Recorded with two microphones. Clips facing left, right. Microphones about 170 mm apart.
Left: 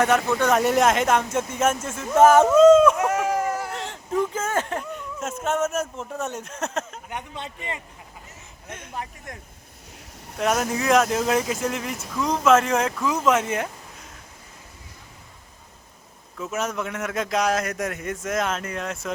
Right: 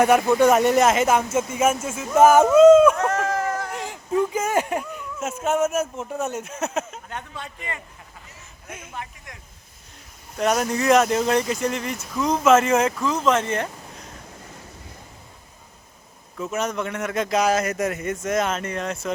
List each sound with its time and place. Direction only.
0.0 s speech: 10° right (ahead or behind)
0.6 s speech: centre (ahead or behind)
2.9 s a sound: 10° left (ahead or behind)
3.7 s speech: 5° right (ahead or behind)
7.1 s speech: 20° left (ahead or behind)
8.9 s speech: 40° left (ahead or behind)
10.3 s speech: centre (ahead or behind)
13.1 s speech: 10° left (ahead or behind)
16.4 s speech: centre (ahead or behind)